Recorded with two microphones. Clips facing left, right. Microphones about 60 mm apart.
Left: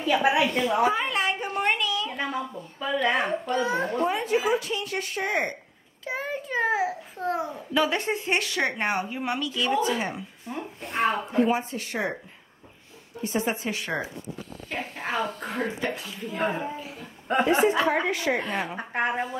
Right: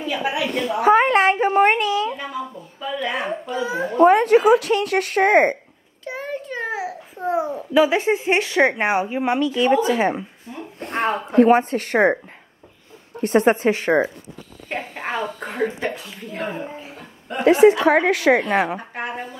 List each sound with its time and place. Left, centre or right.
0.2 s a woman's voice: centre
0.8 s a woman's voice: right
2.8 s a child's voice: centre
4.0 s speech: right
6.0 s a child's voice: centre
7.2 s speech: centre
8.4 s speech: right
10.8 s speech: right
13.2 s a woman's voice: right
13.7 s speech: right
16.3 s speech: centre
17.5 s a woman's voice: right
18.5 s a woman's voice: right
18.8 s a woman's voice: left